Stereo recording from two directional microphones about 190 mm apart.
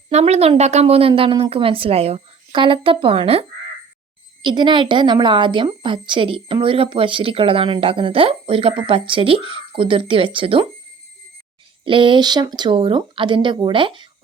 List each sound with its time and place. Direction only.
0.1 s speech: 35° right (ahead or behind)
4.4 s speech: 25° right (ahead or behind)
11.9 s speech: 25° right (ahead or behind)